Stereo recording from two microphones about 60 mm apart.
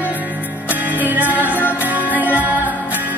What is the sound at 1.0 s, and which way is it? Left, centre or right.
Music, right.